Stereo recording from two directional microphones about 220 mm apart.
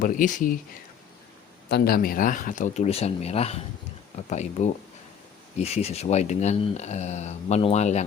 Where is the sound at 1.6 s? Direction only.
45° left (ahead or behind).